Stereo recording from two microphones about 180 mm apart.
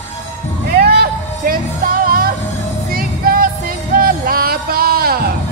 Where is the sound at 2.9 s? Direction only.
55° right (ahead or behind).